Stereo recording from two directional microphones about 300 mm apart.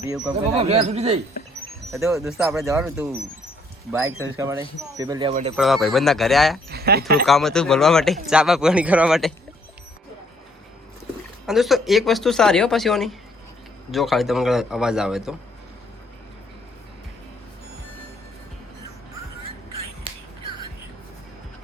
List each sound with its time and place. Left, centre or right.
0.4 s a man's voice: right
1.9 s speech: centre
5.3 s a man's voice: right
5.5 s speech: centre
6.7 s speech: right
7.3 s speech: centre
11.4 s speech: centre